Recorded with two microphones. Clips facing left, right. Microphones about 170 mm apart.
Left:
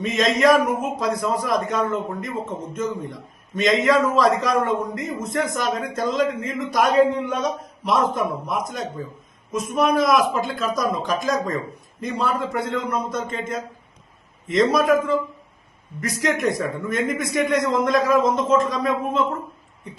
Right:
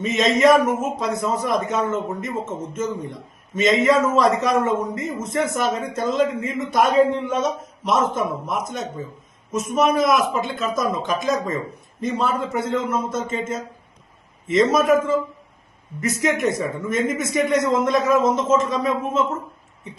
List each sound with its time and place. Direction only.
0.0 s a man's voice: centre (ahead or behind)
5.7 s speech: 25° right (ahead or behind)
6.0 s a man's voice: 5° right (ahead or behind)